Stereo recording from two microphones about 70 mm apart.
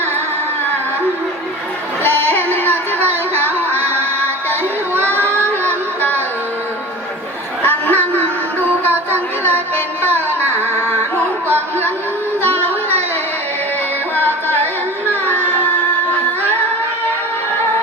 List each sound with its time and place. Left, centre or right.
2.0 s music: left
4.9 s child singing: right
7.6 s a sound: left
8.8 s music: right
10.0 s carnatic music: right